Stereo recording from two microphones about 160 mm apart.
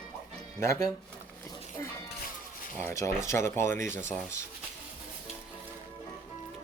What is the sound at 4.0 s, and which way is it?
Speech, 50° right (ahead or behind).